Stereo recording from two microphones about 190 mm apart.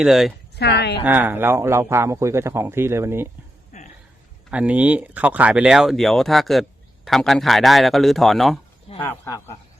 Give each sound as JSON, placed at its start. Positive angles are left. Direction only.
{"t": 0.0, "sound": "speech", "side_deg": 0}
{"t": 0.5, "sound": "speech", "side_deg": 60}
{"t": 1.0, "sound": "speech", "side_deg": -10}
{"t": 3.7, "sound": "a sound", "side_deg": 35}
{"t": 4.5, "sound": "speech", "side_deg": -5}
{"t": 9.0, "sound": "speech", "side_deg": 15}